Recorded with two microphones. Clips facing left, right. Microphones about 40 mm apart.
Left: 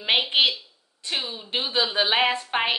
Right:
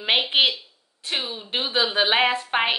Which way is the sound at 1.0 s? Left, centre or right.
Right.